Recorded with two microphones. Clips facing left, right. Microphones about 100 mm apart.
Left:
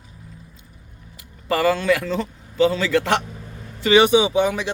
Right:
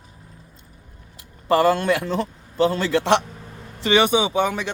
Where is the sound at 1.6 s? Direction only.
50° right (ahead or behind).